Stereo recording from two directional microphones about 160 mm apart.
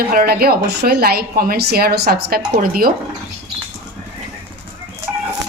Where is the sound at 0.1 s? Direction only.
70° right (ahead or behind).